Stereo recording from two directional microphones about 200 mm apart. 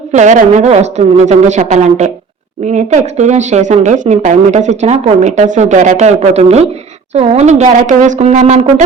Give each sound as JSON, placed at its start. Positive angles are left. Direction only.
{"t": 0.1, "sound": "speech", "side_deg": -35}